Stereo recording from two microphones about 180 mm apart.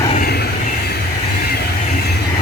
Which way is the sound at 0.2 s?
65° left (ahead or behind).